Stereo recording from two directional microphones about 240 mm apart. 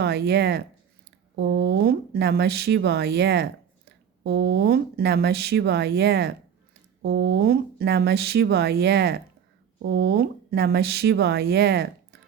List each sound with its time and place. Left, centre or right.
0.0 s speech: right